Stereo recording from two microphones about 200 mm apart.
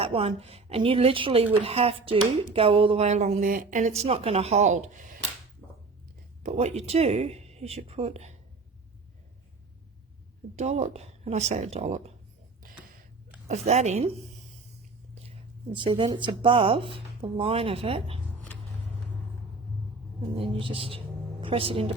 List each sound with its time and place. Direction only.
0.0 s speech: 30° right (ahead or behind)
5.6 s a sound: 5° left (ahead or behind)
6.4 s speech: 35° right (ahead or behind)
10.5 s speech: 35° right (ahead or behind)
13.5 s speech: 35° right (ahead or behind)
15.7 s speech: 25° right (ahead or behind)
20.3 s a woman's voice: 25° right (ahead or behind)